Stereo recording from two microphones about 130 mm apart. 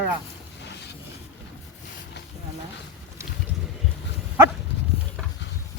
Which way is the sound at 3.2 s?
25° right (ahead or behind).